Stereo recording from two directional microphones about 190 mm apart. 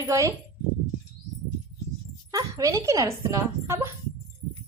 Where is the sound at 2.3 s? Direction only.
20° right (ahead or behind).